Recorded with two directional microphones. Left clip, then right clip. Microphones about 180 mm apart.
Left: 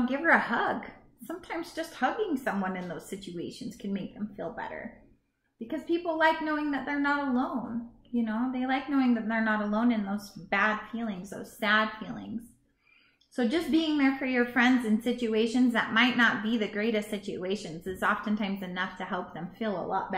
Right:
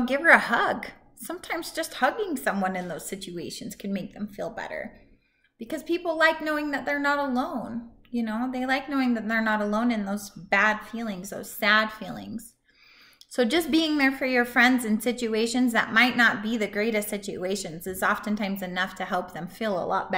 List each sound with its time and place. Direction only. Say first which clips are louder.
0.0 s a woman's voice: right 6 dB; 5° right (ahead or behind)
13.4 s a woman's voice: right 5 dB; 10° right (ahead or behind)